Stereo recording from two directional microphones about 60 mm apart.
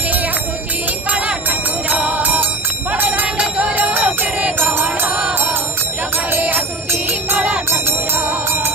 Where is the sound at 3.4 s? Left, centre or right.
Right.